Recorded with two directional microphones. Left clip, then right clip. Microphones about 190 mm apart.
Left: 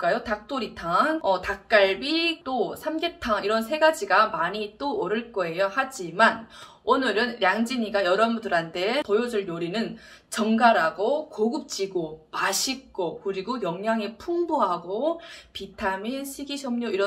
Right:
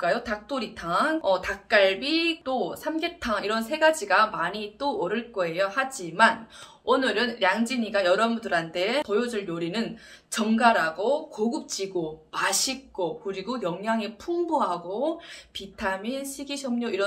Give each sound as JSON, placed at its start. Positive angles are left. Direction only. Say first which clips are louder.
{"t": 0.0, "sound": "a woman's voice", "louder": "left 1 dB", "side_deg": -5}